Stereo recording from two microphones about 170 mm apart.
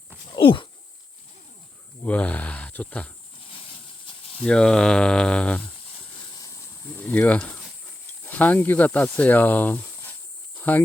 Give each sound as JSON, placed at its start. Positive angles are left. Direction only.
{"t": 0.3, "sound": "a sound", "side_deg": 30}
{"t": 2.0, "sound": "speech", "side_deg": 10}
{"t": 3.5, "sound": "snake", "side_deg": 30}
{"t": 4.4, "sound": "speech", "side_deg": 5}
{"t": 6.3, "sound": "a sound", "side_deg": 20}
{"t": 6.8, "sound": "speech", "side_deg": 10}